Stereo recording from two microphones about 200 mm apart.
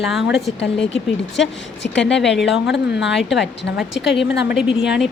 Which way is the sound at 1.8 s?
60° left (ahead or behind).